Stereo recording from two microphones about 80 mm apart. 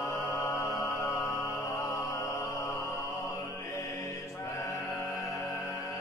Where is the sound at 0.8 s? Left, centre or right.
Left.